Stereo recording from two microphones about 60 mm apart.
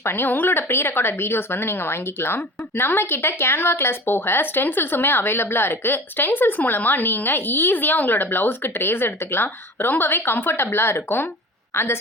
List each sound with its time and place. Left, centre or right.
0.0 s a woman's voice: left